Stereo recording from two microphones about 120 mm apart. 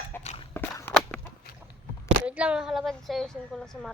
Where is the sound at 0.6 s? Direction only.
20° left (ahead or behind).